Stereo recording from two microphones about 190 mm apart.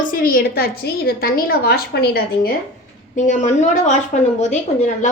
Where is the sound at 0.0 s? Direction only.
45° left (ahead or behind).